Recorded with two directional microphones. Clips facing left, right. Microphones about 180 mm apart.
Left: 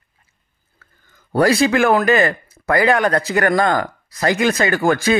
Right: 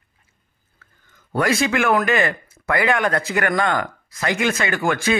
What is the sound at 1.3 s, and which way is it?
Speech, 35° left (ahead or behind).